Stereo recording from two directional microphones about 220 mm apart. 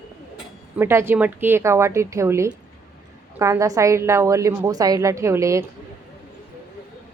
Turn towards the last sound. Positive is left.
turn(degrees=-15)  # may be behind; listen again after turning